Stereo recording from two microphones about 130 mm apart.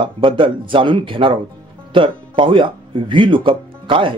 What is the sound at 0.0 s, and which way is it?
Speech, 40° right (ahead or behind).